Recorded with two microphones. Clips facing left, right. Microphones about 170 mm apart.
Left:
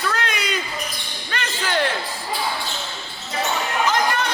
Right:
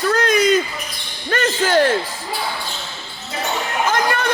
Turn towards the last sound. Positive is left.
turn(degrees=-55)  # may be behind; listen again after turning